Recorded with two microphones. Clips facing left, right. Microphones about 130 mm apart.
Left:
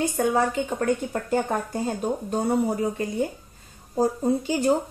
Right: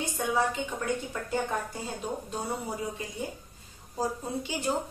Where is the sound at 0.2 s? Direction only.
50° left (ahead or behind).